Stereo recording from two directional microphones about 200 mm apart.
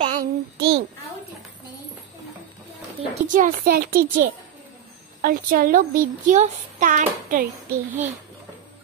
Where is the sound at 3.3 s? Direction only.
40° right (ahead or behind).